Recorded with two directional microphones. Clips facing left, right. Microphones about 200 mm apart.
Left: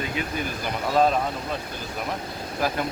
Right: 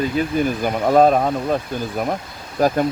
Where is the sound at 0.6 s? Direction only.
50° right (ahead or behind).